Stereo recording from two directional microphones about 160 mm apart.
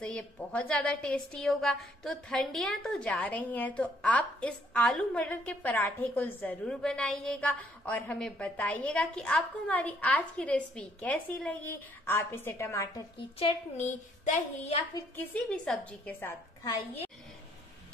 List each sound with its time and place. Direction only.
0.0 s a woman's voice: 5° left (ahead or behind)
13.4 s speech: 35° left (ahead or behind)
13.8 s a sound: 45° left (ahead or behind)
15.1 s a woman's voice: 5° left (ahead or behind)